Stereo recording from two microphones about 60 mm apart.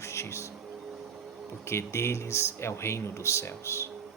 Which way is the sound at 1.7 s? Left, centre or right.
Left.